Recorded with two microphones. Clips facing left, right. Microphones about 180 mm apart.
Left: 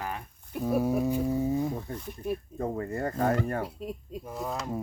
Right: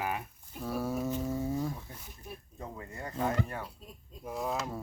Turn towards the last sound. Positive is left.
turn(degrees=0)  # may be behind; listen again after turning